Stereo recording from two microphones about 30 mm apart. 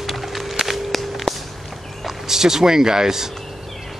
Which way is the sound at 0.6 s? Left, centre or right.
Centre.